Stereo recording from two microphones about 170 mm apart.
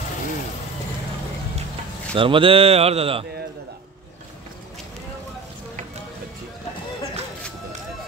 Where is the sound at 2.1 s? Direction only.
30° right (ahead or behind).